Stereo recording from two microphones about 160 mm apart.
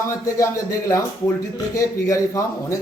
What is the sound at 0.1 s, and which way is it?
A man's voice, 20° left (ahead or behind).